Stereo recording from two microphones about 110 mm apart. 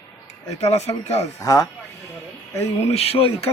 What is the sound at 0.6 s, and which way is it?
Speech, 75° left (ahead or behind).